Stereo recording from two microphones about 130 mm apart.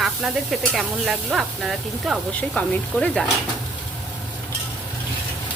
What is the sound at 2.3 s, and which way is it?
Speech, 10° left (ahead or behind).